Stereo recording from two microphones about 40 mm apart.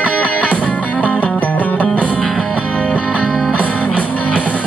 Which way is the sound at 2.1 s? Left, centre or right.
Centre.